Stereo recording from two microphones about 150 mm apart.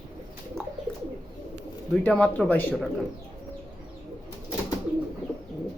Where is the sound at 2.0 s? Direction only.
10° left (ahead or behind).